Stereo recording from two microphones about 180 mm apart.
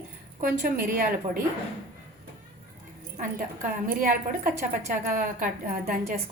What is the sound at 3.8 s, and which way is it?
A woman's voice, 50° right (ahead or behind).